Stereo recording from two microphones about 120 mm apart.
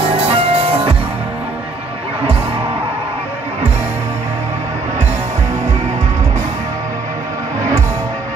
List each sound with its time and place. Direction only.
0.3 s music: 50° right (ahead or behind)